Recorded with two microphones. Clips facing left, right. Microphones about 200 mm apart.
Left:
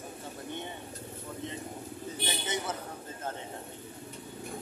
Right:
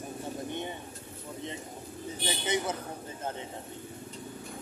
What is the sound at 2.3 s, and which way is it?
Speech, 15° right (ahead or behind).